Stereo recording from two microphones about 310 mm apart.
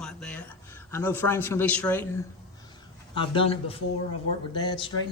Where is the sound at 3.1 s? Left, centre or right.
Centre.